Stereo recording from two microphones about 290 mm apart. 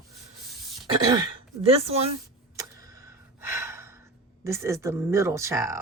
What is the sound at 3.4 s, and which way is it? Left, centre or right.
Gasp, centre.